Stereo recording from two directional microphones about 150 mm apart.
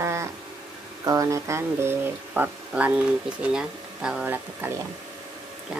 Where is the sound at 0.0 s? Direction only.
20° right (ahead or behind).